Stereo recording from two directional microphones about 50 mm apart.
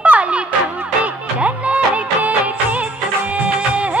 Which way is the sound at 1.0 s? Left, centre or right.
Right.